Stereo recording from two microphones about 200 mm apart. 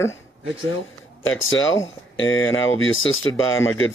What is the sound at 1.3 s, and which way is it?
Speech, 85° left.